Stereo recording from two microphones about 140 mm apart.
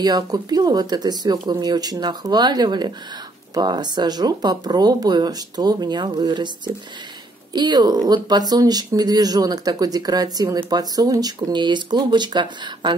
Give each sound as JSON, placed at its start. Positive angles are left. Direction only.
{"t": 0.0, "sound": "speech", "side_deg": -30}